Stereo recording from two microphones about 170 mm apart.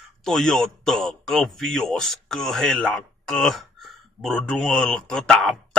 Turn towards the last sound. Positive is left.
turn(degrees=0)  # may be behind; listen again after turning